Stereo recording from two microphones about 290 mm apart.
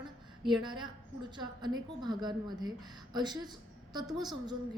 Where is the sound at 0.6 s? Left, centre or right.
Centre.